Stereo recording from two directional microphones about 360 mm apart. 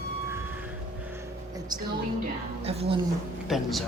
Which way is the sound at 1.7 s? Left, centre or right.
Centre.